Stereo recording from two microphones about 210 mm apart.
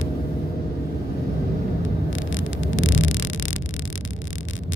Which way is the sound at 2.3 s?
65° left (ahead or behind).